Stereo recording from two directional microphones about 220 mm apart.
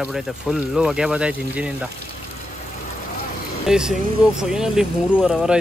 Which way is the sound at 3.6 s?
5° right (ahead or behind).